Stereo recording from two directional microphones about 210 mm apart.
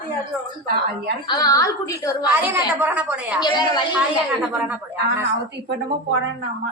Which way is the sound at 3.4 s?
20° left (ahead or behind).